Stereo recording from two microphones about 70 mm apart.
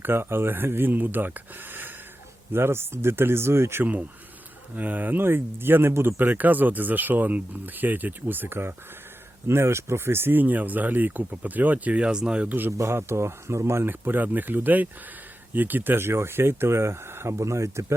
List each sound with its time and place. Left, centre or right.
0.0 s speech: right
4.7 s speech: right
12.7 s speech: right
14.0 s speech: right